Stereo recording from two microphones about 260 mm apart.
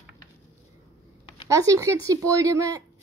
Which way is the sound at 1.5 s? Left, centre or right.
Centre.